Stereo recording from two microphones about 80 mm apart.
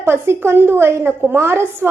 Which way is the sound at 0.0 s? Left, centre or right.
Right.